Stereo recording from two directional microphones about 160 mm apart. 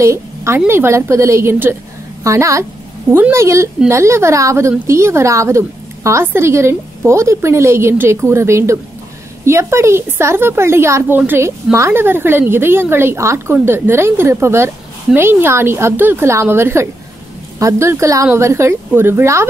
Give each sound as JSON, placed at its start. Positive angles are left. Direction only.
{"t": 0.0, "sound": "a woman's voice", "side_deg": -15}